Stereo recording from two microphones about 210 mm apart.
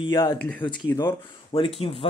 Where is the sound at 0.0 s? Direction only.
20° left (ahead or behind).